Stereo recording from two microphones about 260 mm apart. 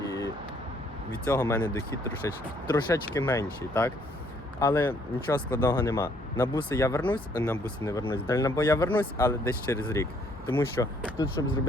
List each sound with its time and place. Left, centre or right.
0.0 s vehicle: centre
1.3 s speech: centre